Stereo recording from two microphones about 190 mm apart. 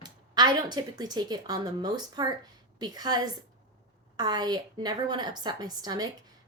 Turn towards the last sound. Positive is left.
turn(degrees=-20)  # may be behind; listen again after turning